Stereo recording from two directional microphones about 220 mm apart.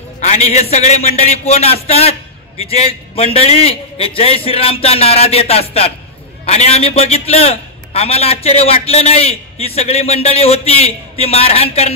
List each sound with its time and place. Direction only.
0.2 s a man's voice: 30° left (ahead or behind)